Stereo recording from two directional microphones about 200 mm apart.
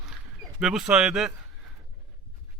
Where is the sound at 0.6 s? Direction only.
5° right (ahead or behind).